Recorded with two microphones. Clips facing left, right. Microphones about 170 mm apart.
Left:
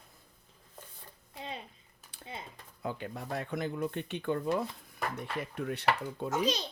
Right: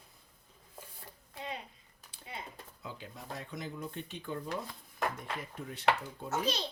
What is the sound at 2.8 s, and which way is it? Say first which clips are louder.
Speech: left 9 dB; 60° left (ahead or behind).